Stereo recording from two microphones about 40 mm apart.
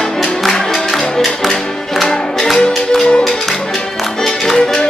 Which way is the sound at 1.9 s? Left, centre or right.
Centre.